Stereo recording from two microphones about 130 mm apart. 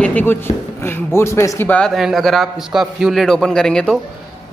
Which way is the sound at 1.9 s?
Centre (ahead or behind).